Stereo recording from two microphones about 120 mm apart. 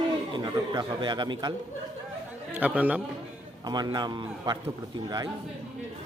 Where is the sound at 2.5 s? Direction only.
15° right (ahead or behind).